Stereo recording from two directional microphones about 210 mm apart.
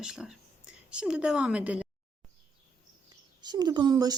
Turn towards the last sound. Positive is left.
turn(degrees=-20)  # may be behind; listen again after turning